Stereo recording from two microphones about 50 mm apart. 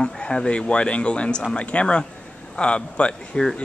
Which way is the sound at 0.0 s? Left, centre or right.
Centre.